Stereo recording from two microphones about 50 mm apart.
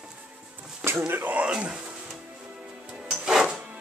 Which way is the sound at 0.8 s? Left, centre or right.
Right.